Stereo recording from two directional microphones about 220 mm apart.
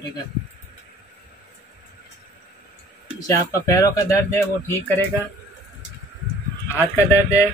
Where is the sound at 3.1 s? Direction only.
15° left (ahead or behind).